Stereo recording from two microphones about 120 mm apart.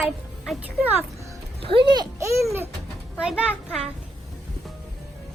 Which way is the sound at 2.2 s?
20° right (ahead or behind).